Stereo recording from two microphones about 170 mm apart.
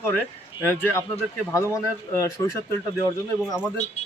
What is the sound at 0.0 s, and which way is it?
Speech, 10° left (ahead or behind).